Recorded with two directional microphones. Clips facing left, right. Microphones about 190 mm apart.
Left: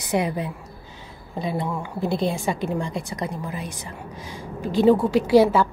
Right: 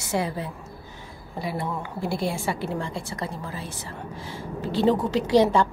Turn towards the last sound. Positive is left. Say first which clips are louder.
# left 3 dB
turn(degrees=5)  # may be behind; listen again after turning